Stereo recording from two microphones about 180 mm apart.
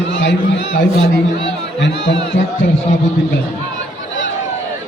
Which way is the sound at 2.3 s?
90° left.